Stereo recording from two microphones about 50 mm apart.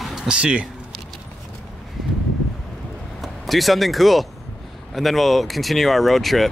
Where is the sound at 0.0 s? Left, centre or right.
Centre.